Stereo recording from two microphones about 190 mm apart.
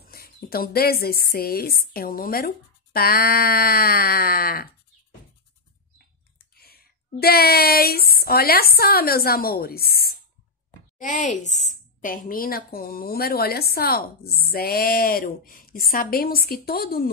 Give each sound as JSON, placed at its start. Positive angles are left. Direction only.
{"t": 0.0, "sound": "a woman's voice", "side_deg": 50}
{"t": 6.5, "sound": "a sound", "side_deg": 55}
{"t": 8.2, "sound": "a woman's voice", "side_deg": 55}
{"t": 11.0, "sound": "a woman's voice", "side_deg": 40}